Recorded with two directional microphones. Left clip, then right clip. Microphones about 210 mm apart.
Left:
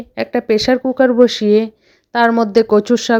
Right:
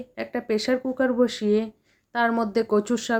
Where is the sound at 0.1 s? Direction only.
35° left (ahead or behind).